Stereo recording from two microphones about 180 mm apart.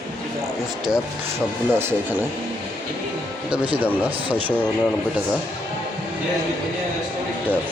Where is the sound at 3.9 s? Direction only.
10° right (ahead or behind).